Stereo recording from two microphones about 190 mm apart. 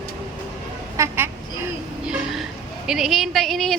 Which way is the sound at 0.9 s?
15° right (ahead or behind).